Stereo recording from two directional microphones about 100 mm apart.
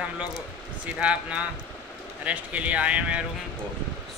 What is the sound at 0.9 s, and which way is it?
Speech, 10° right (ahead or behind).